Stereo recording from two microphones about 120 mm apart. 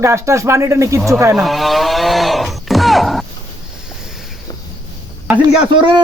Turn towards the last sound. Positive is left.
turn(degrees=-40)  # may be behind; listen again after turning